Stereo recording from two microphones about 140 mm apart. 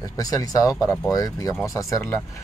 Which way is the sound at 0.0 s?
25° left (ahead or behind).